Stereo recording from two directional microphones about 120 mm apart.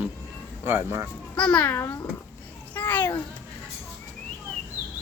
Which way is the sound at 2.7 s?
15° left (ahead or behind).